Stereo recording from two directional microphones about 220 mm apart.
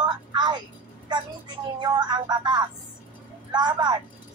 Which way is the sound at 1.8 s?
20° right (ahead or behind).